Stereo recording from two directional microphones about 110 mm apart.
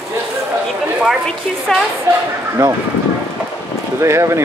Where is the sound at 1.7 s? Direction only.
5° left (ahead or behind).